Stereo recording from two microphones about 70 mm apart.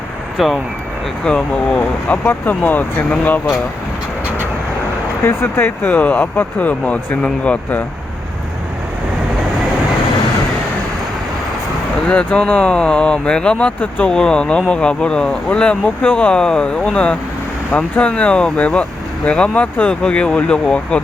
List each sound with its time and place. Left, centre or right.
0.3 s speech: centre
1.2 s speech: centre
5.2 s speech: left; by 7.8 s centre
12.0 s speech: centre